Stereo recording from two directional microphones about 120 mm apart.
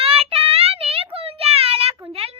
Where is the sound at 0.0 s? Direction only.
55° right (ahead or behind).